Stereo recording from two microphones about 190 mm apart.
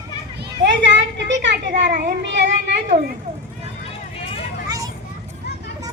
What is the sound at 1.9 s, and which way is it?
Speech, 60° right (ahead or behind).